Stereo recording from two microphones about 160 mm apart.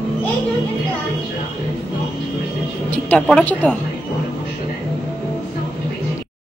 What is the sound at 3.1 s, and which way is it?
Speech, 5° left (ahead or behind).